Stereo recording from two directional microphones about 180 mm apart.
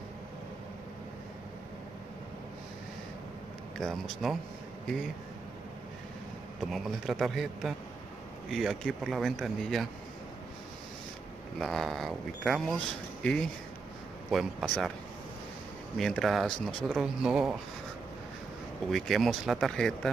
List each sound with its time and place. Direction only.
3.7 s speech: centre (ahead or behind)
6.6 s speech: centre (ahead or behind)
11.5 s speech: centre (ahead or behind)
16.0 s speech: centre (ahead or behind)
18.9 s speech: centre (ahead or behind)